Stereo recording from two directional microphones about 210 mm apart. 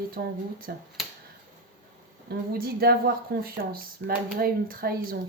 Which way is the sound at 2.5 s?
45° right (ahead or behind).